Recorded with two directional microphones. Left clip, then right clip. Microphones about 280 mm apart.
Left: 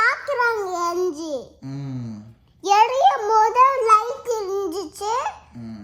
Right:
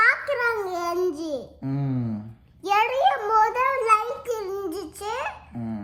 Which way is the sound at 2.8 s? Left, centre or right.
Left.